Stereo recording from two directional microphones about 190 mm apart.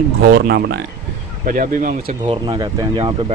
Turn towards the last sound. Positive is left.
turn(degrees=-25)  # may be behind; listen again after turning